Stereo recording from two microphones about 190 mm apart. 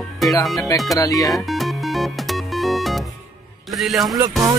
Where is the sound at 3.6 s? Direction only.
Centre (ahead or behind).